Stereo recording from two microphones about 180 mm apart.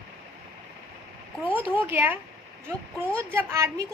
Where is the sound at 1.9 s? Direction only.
10° right (ahead or behind).